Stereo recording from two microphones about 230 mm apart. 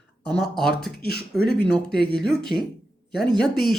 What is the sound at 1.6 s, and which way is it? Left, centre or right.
Speech, centre.